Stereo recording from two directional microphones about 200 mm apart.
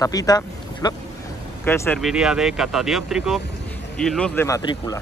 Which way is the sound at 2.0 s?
Centre (ahead or behind).